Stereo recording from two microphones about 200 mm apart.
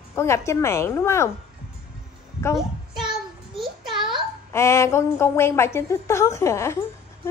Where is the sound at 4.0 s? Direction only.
25° right (ahead or behind).